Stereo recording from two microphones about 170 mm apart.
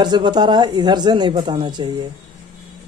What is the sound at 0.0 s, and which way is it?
Speech, 25° right (ahead or behind).